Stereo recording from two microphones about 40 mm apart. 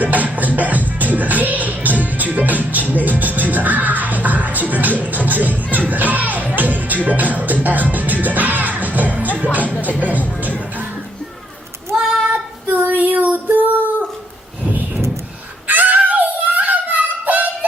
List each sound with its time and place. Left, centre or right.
0.0 s music: right
9.6 s music: left
10.0 s music: right
12.6 s child singing: right
13.0 s female singing: right
15.6 s a sound: right